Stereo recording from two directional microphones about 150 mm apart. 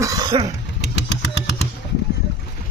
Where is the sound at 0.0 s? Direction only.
20° right (ahead or behind).